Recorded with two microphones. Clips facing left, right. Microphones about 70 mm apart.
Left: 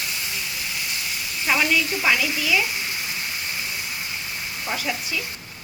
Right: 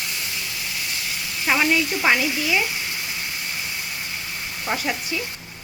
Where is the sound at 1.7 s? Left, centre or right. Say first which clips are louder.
Right 2 dB; right.